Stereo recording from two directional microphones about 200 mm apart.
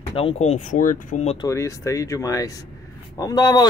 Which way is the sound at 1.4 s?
15° left (ahead or behind).